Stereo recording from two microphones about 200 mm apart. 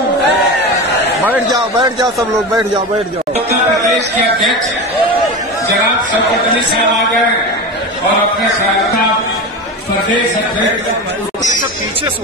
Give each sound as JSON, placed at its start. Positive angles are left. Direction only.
{"t": 1.5, "sound": "a man's voice", "side_deg": -20}